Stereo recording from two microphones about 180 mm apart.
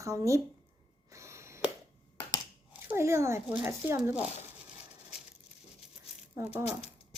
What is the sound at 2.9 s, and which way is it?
Speech, 15° right (ahead or behind).